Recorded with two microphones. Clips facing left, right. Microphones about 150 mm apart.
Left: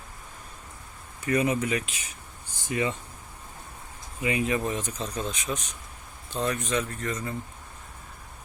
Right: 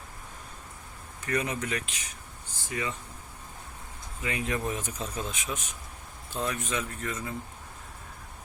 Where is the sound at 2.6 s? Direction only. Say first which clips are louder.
Left 6 dB; 25° left (ahead or behind).